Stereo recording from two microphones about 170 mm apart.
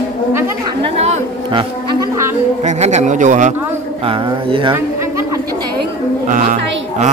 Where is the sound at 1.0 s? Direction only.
35° right (ahead or behind).